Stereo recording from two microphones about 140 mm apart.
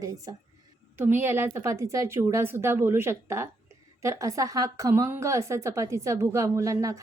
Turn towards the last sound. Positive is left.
turn(degrees=-25)  # may be behind; listen again after turning